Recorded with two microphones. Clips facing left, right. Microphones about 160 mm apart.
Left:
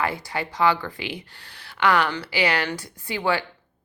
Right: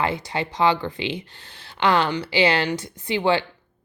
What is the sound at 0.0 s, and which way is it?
Speech, 20° right (ahead or behind).